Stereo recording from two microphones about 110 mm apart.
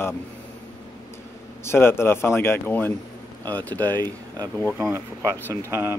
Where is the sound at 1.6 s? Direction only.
20° left (ahead or behind).